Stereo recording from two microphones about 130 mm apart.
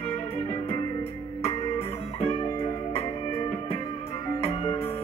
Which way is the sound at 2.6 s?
50° left (ahead or behind).